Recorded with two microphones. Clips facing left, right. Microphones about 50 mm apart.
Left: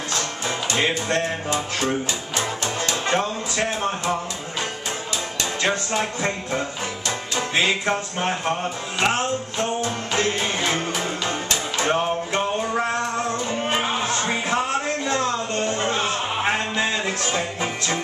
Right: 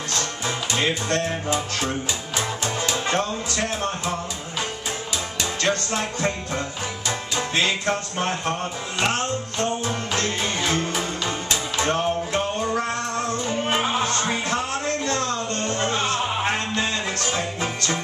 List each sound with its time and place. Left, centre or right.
0.7 s music: centre
2.3 s music: centre
3.1 s a man's voice: centre
5.6 s music: centre